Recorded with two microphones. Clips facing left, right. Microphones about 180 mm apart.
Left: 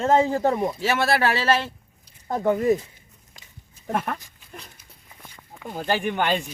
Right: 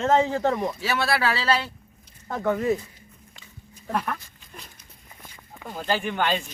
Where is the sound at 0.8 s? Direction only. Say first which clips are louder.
Left 4 dB; 45° left (ahead or behind).